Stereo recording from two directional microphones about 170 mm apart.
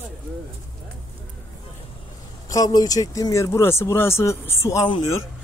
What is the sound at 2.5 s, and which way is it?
Speech, 20° left (ahead or behind).